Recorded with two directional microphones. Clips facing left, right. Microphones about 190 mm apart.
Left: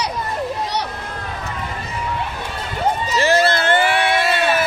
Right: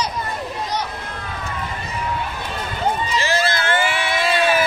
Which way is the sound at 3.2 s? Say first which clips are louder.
Left 9 dB; 60° left (ahead or behind).